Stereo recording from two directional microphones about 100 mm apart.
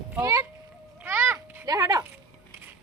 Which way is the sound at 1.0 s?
20° right (ahead or behind).